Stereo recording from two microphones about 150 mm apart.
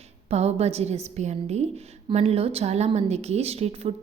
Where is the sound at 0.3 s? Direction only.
45° right (ahead or behind).